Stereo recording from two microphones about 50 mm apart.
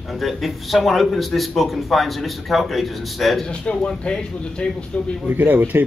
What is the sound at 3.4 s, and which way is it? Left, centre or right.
A man's voice, centre.